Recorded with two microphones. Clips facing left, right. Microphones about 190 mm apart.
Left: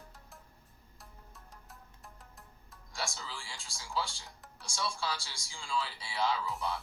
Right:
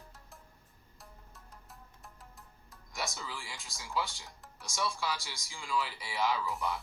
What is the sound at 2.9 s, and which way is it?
Speech, 20° right (ahead or behind).